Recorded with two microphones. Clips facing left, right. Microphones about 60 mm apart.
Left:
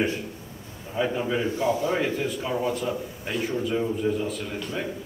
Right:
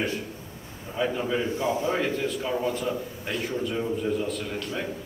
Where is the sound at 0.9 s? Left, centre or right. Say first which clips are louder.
Left 1 dB; centre.